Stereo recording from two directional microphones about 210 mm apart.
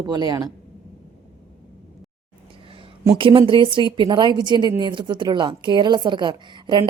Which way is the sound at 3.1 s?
25° right (ahead or behind).